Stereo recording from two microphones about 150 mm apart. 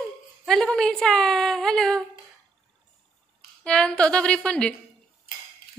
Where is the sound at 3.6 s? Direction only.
5° left (ahead or behind).